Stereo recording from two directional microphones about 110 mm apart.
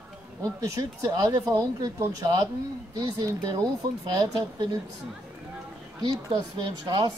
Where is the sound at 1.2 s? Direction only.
35° right (ahead or behind).